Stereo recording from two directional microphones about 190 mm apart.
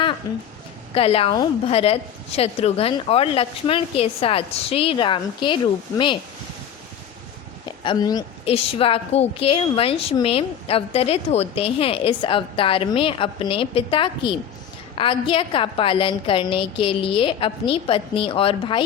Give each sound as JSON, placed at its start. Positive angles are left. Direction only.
{"t": 0.9, "sound": "a woman's voice", "side_deg": 30}
{"t": 7.9, "sound": "a woman's voice", "side_deg": 20}
{"t": 8.4, "sound": "a woman's voice", "side_deg": 30}